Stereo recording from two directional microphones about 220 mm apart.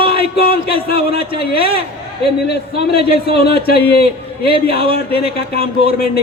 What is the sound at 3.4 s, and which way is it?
Speech, 45° left (ahead or behind).